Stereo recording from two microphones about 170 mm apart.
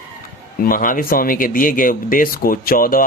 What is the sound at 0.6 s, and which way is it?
Speech, 55° left (ahead or behind).